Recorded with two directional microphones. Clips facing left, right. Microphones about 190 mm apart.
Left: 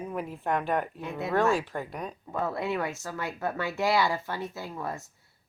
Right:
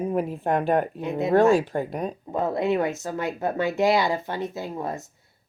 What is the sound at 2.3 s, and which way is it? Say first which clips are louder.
Speech: right 6 dB; 20° right (ahead or behind).